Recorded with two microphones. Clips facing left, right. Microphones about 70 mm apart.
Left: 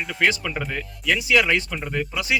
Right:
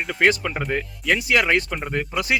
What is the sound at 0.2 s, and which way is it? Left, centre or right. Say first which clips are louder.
Speech: right 3 dB; right.